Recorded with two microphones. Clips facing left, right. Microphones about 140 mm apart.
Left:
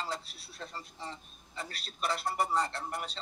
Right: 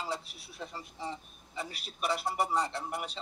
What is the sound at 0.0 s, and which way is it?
A man's voice, 10° right (ahead or behind).